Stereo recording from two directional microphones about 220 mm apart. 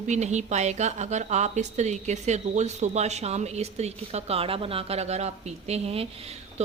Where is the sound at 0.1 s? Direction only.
30° right (ahead or behind).